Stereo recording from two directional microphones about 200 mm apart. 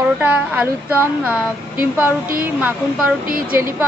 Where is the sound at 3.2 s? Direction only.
45° right (ahead or behind).